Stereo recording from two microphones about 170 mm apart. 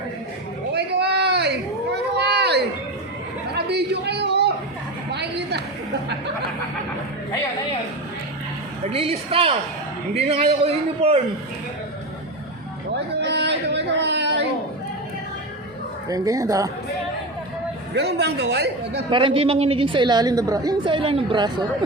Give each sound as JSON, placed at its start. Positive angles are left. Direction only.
{"t": 0.7, "sound": "a sound", "side_deg": -80}
{"t": 3.7, "sound": "a sound", "side_deg": -75}
{"t": 8.9, "sound": "a man's voice", "side_deg": -35}
{"t": 13.1, "sound": "music", "side_deg": -85}
{"t": 16.0, "sound": "a woman's voice", "side_deg": -20}
{"t": 17.9, "sound": "a woman's voice", "side_deg": -75}
{"t": 19.1, "sound": "a woman's voice", "side_deg": -30}